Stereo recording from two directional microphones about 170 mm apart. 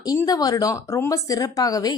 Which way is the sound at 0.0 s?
20° left (ahead or behind).